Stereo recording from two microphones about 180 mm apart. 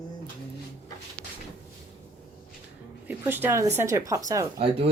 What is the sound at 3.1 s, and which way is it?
Speech, 10° right (ahead or behind).